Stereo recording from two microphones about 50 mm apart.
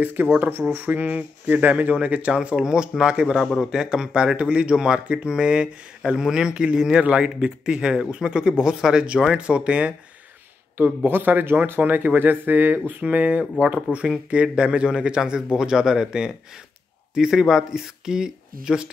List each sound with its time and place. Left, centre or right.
0.0 s a man's voice: right
11.1 s speech: right
13.0 s a man's voice: right